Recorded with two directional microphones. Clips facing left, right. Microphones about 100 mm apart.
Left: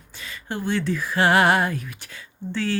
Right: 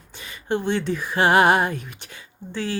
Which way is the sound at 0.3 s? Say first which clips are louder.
Right 3 dB; 20° right (ahead or behind).